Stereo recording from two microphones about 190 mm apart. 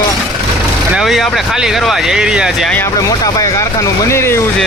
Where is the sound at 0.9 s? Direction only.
Centre (ahead or behind).